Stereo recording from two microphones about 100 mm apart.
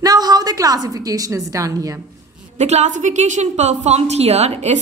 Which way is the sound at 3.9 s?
90° right.